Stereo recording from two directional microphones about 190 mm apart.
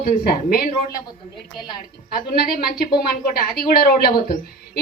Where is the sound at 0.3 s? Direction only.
50° left (ahead or behind).